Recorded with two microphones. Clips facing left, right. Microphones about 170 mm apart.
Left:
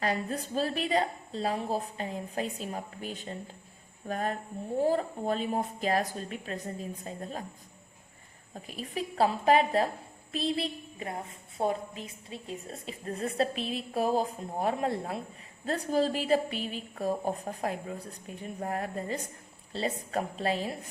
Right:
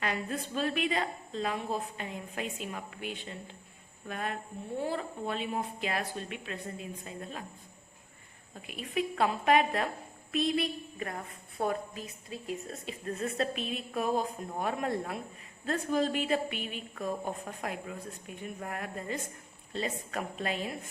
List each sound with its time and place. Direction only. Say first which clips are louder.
0.0 s a woman's voice: left 3 dB; 35° left (ahead or behind)
8.5 s a woman's voice: right 2 dB; 35° left (ahead or behind)